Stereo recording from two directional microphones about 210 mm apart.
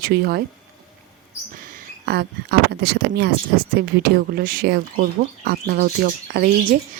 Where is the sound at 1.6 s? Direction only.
50° right (ahead or behind).